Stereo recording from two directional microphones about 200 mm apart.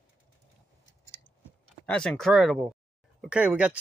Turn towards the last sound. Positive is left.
turn(degrees=-5)  # may be behind; listen again after turning